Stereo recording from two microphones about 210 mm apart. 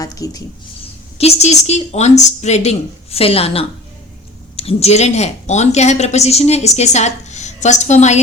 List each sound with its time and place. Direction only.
0.0 s speech: 15° left (ahead or behind)
1.2 s a woman's voice: 30° left (ahead or behind)